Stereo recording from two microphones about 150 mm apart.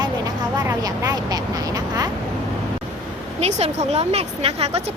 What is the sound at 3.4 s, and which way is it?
Speech, 45° right (ahead or behind).